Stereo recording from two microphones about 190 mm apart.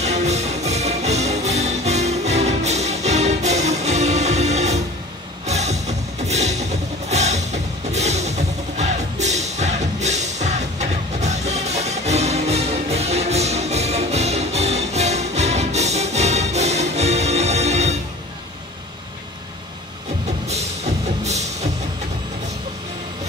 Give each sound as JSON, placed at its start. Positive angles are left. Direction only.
{"t": 0.0, "sound": "music", "side_deg": -35}
{"t": 21.2, "sound": "music", "side_deg": -35}